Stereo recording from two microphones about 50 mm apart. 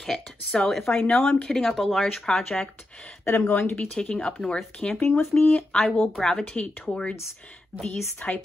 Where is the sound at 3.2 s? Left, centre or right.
Left.